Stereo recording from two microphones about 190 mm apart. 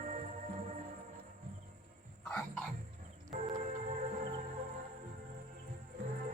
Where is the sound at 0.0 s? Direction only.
40° right (ahead or behind).